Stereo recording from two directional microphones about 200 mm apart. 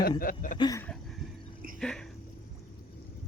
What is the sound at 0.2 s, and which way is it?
Speech, 40° left (ahead or behind).